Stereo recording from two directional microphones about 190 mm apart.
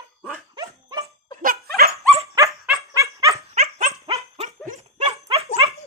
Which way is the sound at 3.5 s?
35° right (ahead or behind).